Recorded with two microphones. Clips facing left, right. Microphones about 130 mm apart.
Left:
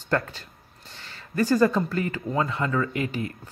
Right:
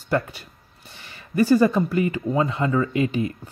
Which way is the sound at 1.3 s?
15° right (ahead or behind).